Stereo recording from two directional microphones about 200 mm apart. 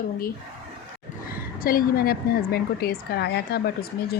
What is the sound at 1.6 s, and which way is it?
A woman's voice, 45° left (ahead or behind).